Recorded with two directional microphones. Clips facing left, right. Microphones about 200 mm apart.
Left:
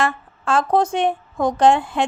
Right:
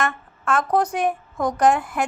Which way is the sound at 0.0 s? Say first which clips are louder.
Left 3 dB; 30° left (ahead or behind).